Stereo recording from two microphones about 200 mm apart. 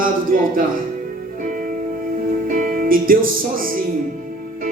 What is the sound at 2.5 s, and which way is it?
Speech, 45° right (ahead or behind).